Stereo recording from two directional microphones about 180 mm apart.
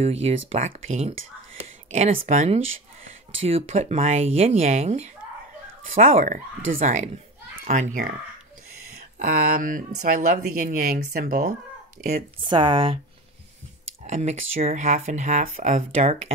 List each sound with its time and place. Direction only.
0.0 s speech: 35° right (ahead or behind)
8.9 s speech: 60° right (ahead or behind)
12.4 s speech: 25° right (ahead or behind)
14.0 s speech: 40° right (ahead or behind)